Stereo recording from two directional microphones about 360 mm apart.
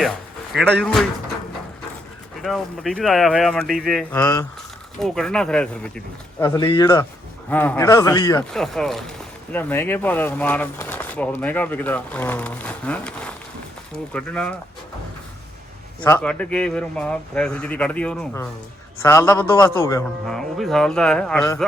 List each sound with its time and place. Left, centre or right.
0.5 s speech: centre
2.4 s speech: centre
16.0 s speech: centre